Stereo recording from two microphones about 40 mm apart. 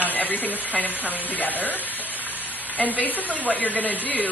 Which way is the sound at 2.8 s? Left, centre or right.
Left.